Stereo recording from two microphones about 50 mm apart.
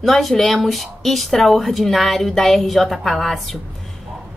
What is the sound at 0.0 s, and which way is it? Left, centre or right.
Speech, centre.